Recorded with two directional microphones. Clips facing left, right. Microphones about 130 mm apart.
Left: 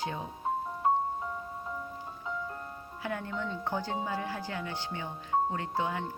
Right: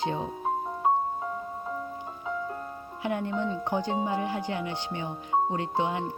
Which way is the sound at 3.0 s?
20° right (ahead or behind).